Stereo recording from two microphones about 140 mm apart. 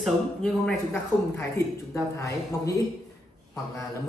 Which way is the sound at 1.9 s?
20° left (ahead or behind).